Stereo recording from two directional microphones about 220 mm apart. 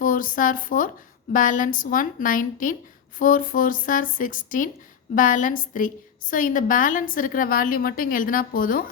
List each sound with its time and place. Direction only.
0.0 s a woman's voice: 40° left (ahead or behind)